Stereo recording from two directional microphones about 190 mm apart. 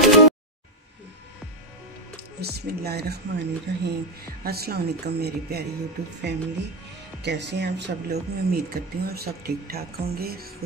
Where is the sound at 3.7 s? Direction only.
60° right (ahead or behind).